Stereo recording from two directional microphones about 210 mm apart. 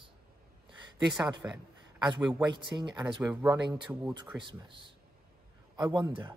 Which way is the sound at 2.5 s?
20° right (ahead or behind).